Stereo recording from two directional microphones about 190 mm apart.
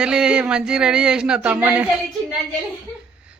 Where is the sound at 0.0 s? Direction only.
5° right (ahead or behind).